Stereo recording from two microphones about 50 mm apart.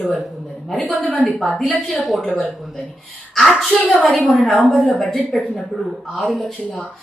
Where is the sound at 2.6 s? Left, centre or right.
Centre.